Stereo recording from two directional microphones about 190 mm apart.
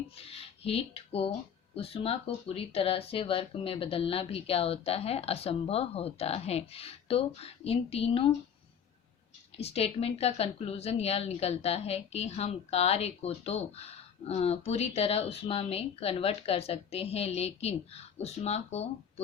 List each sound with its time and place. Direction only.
0.2 s a woman's voice: 30° left (ahead or behind)
9.6 s a woman's voice: 30° left (ahead or behind)